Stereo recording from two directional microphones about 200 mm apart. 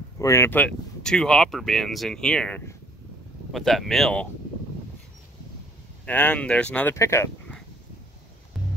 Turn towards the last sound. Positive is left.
turn(degrees=10)  # may be behind; listen again after turning